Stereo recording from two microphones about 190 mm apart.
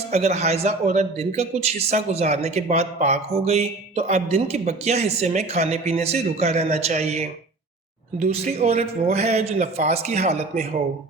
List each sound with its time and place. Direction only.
0.1 s a man's voice: 35° right (ahead or behind)